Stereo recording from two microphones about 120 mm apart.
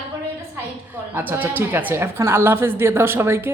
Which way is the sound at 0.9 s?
15° right (ahead or behind).